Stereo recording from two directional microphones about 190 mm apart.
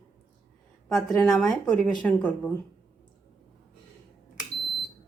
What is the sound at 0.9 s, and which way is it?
A woman's voice, centre (ahead or behind).